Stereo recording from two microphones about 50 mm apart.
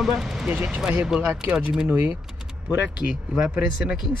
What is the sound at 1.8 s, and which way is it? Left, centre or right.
Speech, right.